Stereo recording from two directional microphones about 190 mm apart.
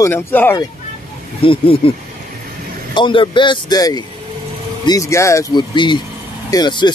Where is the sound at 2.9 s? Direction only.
25° left (ahead or behind).